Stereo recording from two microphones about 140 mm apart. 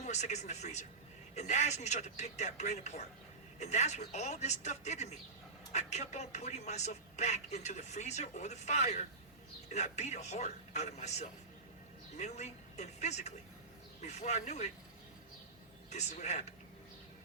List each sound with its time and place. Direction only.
0.0 s speech: 55° left (ahead or behind)
15.9 s speech: 55° left (ahead or behind)